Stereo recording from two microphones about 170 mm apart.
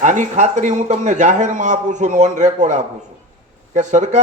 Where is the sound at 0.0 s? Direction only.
45° right (ahead or behind).